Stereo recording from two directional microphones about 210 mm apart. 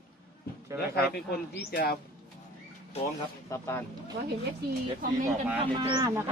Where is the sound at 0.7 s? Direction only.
50° left (ahead or behind).